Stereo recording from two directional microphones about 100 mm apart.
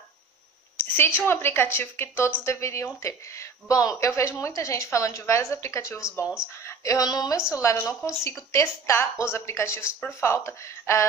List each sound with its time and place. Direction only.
0.7 s a woman's voice: 20° left (ahead or behind)
6.2 s speech: 5° right (ahead or behind)
6.6 s speech: 35° left (ahead or behind)
7.5 s a woman's voice: 30° left (ahead or behind)